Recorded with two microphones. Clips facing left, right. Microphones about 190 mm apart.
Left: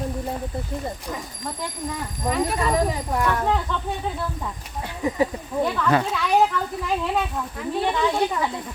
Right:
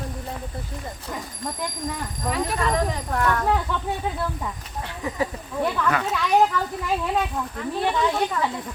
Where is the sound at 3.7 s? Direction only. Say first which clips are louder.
Even; 10° right (ahead or behind).